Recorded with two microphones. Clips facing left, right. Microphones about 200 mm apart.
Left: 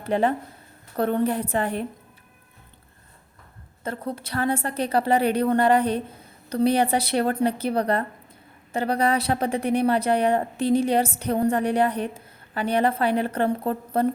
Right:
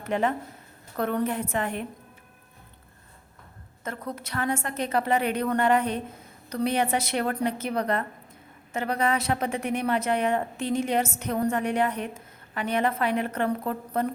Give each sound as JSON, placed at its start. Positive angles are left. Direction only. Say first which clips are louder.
{"t": 0.0, "sound": "a woman's voice", "louder": "left 4 dB", "side_deg": 35}
{"t": 3.8, "sound": "a woman's voice", "louder": "left 4 dB", "side_deg": 30}